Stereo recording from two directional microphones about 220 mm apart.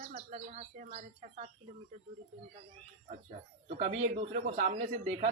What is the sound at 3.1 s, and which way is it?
Speech, 30° right (ahead or behind).